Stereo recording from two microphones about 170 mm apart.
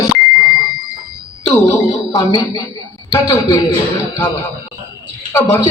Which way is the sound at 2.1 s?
25° left (ahead or behind).